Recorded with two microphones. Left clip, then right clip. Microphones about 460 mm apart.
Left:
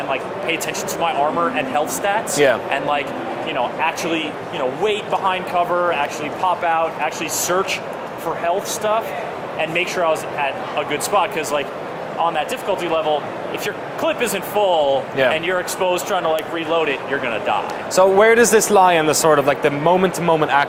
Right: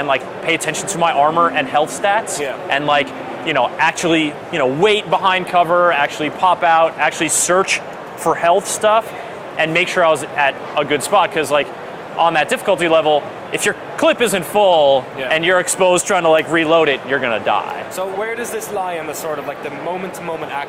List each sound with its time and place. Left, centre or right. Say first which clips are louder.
0.1 s speech: right 4 dB; right
17.9 s speech: left 13 dB; left